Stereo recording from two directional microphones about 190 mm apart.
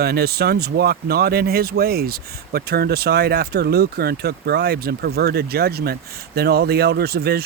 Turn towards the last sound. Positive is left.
turn(degrees=-55)  # may be behind; listen again after turning